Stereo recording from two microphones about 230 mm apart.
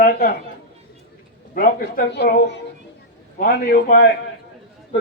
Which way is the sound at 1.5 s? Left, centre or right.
Left.